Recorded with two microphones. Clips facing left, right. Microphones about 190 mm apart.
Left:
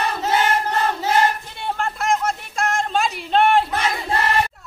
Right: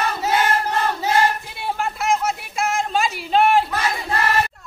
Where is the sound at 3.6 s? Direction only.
25° left (ahead or behind).